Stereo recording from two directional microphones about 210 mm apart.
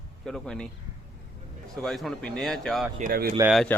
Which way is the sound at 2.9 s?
40° right (ahead or behind).